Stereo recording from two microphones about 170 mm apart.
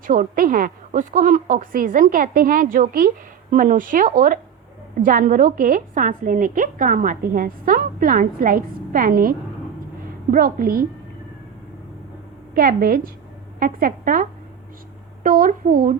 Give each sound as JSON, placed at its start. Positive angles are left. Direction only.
{"t": 0.1, "sound": "a woman's voice", "side_deg": -55}
{"t": 10.3, "sound": "a woman's voice", "side_deg": -60}
{"t": 12.5, "sound": "a woman's voice", "side_deg": -55}